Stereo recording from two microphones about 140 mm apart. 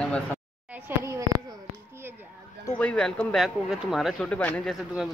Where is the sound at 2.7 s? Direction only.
10° left (ahead or behind).